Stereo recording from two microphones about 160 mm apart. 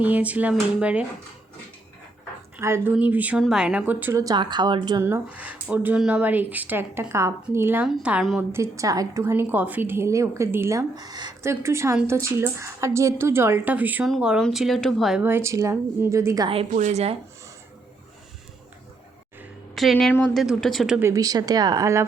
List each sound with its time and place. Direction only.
0.0 s a woman's voice: 10° right (ahead or behind)
2.6 s a woman's voice: 15° right (ahead or behind)
5.0 s a woman's voice: 10° right (ahead or behind)
8.4 s a woman's voice: 15° right (ahead or behind); by 15.2 s centre (ahead or behind)
15.2 s a woman's voice: 15° right (ahead or behind)
16.7 s speech: 45° right (ahead or behind)
19.7 s speech: centre (ahead or behind)
21.0 s a woman's voice: 20° right (ahead or behind)